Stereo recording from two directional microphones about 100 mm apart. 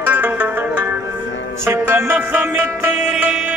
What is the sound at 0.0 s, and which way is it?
Zither, 15° right (ahead or behind).